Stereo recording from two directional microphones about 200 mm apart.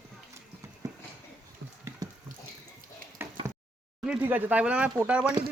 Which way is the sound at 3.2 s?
10° right (ahead or behind).